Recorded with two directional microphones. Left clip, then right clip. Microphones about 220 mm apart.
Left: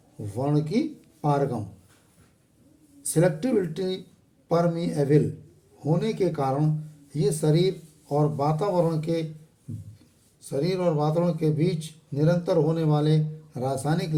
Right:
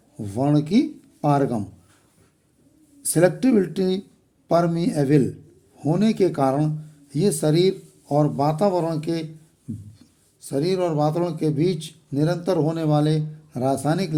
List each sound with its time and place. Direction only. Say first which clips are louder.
0.3 s speech: right 5 dB; 50° right (ahead or behind)
3.0 s speech: right 5 dB; 50° right (ahead or behind)
10.4 s speech: right 3 dB; 45° right (ahead or behind)